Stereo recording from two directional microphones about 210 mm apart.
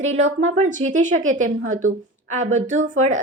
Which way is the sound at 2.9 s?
35° right (ahead or behind).